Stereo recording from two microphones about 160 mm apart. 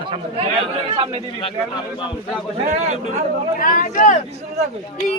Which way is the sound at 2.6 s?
50° right (ahead or behind).